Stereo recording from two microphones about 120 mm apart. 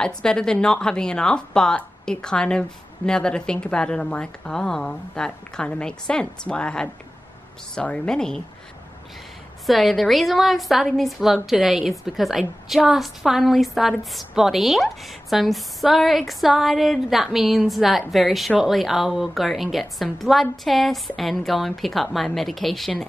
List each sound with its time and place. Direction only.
0.0 s a woman's voice: 5° left (ahead or behind)
9.7 s a woman's voice: centre (ahead or behind)